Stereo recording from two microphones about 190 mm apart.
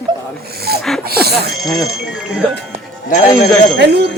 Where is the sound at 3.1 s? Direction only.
40° left (ahead or behind).